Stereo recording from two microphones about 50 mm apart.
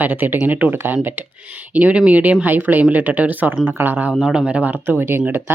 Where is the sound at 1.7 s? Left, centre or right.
Right.